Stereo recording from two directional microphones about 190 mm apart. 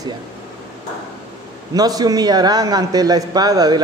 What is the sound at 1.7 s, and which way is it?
A man's voice, 20° right (ahead or behind).